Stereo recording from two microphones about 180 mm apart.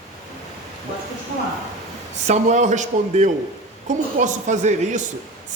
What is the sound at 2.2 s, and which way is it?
A woman's voice, 40° right (ahead or behind).